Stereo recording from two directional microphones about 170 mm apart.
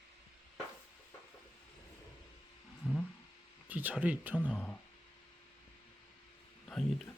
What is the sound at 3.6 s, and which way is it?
Speech, 10° right (ahead or behind).